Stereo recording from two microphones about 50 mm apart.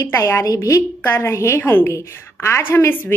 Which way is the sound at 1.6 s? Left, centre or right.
Left.